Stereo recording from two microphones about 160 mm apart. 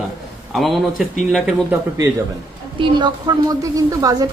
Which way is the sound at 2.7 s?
30° right (ahead or behind).